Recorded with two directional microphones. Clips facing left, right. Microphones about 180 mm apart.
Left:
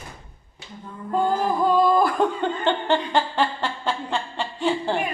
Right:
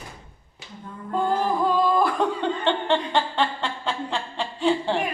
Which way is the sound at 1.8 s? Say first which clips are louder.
Left 4 dB; centre (ahead or behind).